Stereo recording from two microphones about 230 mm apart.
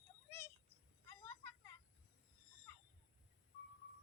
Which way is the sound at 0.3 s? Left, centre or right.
Centre.